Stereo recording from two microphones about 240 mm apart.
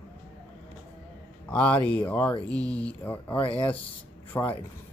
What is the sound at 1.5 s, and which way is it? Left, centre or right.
Speech, centre.